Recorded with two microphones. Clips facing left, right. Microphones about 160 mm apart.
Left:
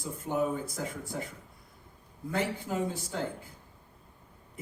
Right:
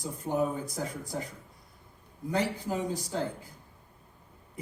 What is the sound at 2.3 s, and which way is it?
Speech, 40° right (ahead or behind).